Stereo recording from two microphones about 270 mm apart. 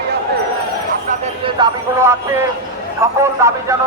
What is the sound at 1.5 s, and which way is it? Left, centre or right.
Speech, centre.